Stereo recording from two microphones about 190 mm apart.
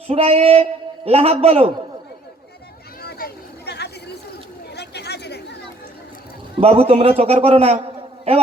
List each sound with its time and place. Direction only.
0.1 s a man's voice: 30° right (ahead or behind)
3.0 s a sound: 55° left (ahead or behind)
4.7 s chatter: 60° left (ahead or behind)
6.6 s a man's voice: 30° right (ahead or behind)